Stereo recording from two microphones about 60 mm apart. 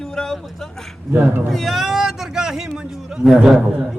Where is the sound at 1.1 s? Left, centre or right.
Right.